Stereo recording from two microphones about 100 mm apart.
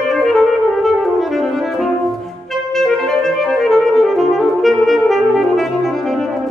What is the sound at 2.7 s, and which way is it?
Music, 5° left (ahead or behind).